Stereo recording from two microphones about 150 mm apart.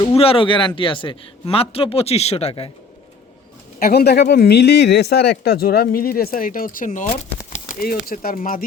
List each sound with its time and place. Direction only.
0.0 s speech: 40° left (ahead or behind)
3.8 s speech: 90° left; by 7.2 s 55° left (ahead or behind)
7.8 s speech: 80° left; by 8.6 s 65° left (ahead or behind)